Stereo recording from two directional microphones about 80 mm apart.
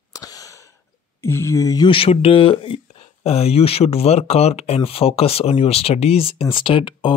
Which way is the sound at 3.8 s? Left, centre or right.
Left.